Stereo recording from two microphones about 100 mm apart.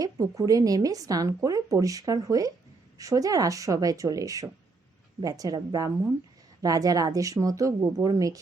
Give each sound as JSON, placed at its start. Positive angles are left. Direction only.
{"t": 0.0, "sound": "speech", "side_deg": -35}